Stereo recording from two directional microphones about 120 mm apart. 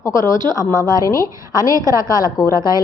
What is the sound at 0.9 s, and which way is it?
Speech, 30° left (ahead or behind).